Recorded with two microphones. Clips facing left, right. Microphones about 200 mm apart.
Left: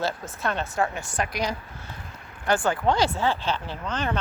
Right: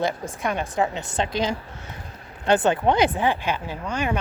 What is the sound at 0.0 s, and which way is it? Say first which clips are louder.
A woman's voice: right 3 dB; 15° right (ahead or behind).